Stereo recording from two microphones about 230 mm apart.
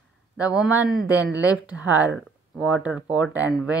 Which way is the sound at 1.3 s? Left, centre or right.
Centre.